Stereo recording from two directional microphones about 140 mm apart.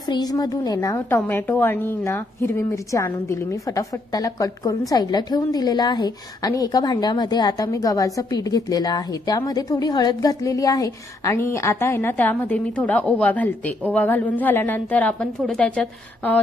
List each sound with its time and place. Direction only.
0.1 s a woman's voice: 30° left (ahead or behind); by 16.3 s 10° left (ahead or behind)